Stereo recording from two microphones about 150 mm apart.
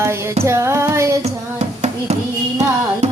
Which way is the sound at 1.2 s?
45° right (ahead or behind).